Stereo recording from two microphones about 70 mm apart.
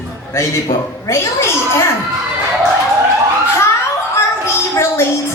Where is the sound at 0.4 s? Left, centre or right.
Left.